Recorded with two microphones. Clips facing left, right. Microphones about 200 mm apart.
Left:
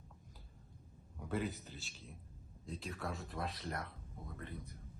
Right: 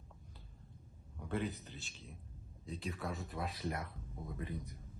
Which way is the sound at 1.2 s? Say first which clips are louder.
Even; centre (ahead or behind).